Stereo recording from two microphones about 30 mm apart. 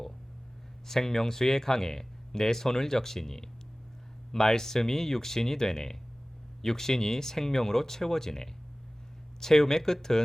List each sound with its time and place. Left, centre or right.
0.9 s speech: centre